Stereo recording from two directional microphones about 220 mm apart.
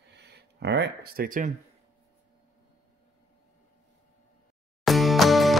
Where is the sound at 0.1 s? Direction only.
50° right (ahead or behind).